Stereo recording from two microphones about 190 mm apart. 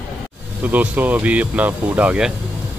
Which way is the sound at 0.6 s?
10° right (ahead or behind).